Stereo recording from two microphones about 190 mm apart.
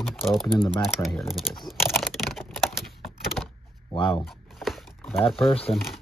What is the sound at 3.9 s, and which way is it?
Speech, 25° left (ahead or behind).